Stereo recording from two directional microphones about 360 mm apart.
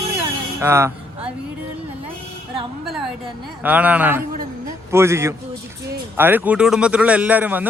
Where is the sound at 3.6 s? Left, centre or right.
Centre.